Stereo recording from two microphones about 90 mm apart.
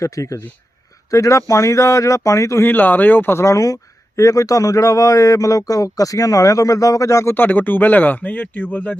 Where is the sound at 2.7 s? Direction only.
20° left (ahead or behind).